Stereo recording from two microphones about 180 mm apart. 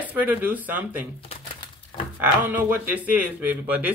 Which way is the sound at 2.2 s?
10° right (ahead or behind).